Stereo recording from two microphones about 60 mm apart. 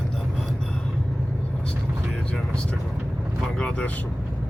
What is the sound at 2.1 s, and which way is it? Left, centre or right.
Vehicle, centre.